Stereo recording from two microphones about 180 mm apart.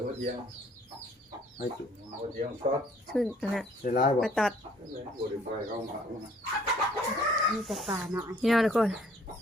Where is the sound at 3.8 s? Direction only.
45° left (ahead or behind).